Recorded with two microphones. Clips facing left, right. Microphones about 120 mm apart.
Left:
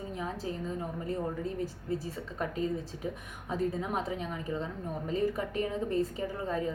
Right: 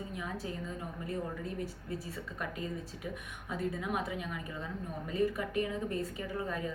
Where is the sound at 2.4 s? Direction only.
30° left (ahead or behind).